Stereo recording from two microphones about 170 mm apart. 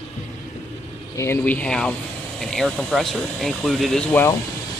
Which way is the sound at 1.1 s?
10° left (ahead or behind).